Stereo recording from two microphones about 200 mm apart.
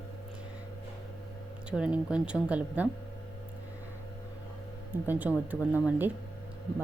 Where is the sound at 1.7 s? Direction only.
5° right (ahead or behind).